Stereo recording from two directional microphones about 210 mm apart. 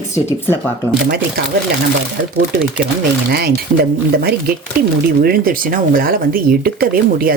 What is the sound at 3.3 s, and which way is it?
Speech, 50° right (ahead or behind).